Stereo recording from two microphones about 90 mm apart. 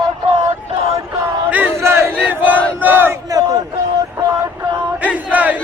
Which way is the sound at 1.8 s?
30° right (ahead or behind).